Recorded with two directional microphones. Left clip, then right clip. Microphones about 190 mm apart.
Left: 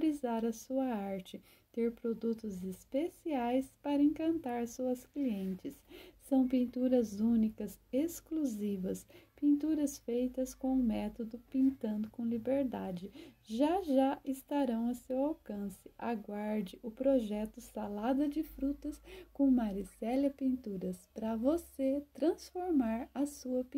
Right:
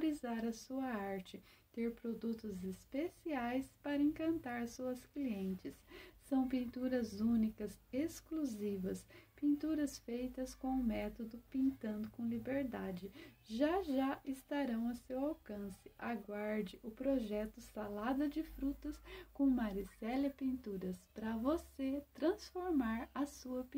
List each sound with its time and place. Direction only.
0.0 s speech: 45° left (ahead or behind)